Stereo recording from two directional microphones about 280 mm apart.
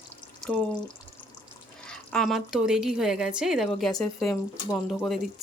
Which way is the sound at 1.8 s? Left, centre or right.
Centre.